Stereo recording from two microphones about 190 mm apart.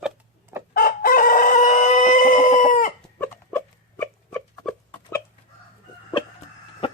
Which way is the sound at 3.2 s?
10° left (ahead or behind).